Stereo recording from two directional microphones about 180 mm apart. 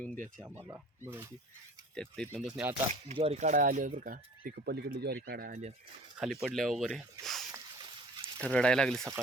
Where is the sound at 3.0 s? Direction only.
35° right (ahead or behind); by 5.2 s 65° right (ahead or behind).